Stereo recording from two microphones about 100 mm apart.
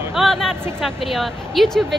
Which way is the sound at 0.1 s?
Centre (ahead or behind).